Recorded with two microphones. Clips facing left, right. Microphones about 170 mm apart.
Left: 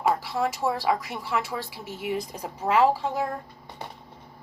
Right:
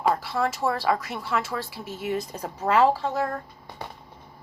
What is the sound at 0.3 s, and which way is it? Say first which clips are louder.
A woman's voice: right 1 dB; 15° left (ahead or behind).